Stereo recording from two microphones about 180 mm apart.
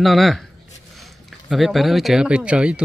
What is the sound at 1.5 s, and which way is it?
Speech, centre (ahead or behind).